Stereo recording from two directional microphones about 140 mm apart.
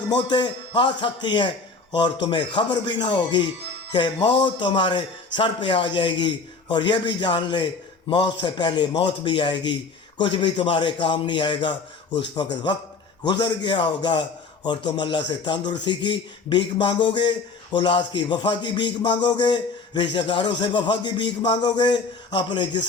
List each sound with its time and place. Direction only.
0.2 s a man's voice: 30° left (ahead or behind)